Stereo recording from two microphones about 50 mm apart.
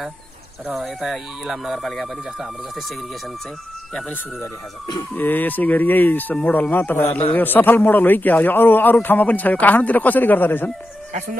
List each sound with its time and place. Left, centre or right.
0.7 s speech: centre
5.1 s a man's voice: left